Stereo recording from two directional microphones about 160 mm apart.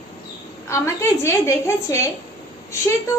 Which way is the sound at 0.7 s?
15° left (ahead or behind).